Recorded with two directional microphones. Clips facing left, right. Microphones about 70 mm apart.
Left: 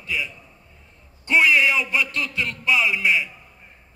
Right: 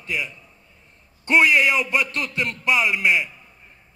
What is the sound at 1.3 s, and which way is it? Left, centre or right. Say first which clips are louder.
Speech: right 1 dB; right.